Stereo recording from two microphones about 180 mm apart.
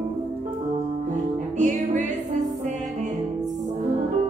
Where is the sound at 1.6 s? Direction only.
40° right (ahead or behind).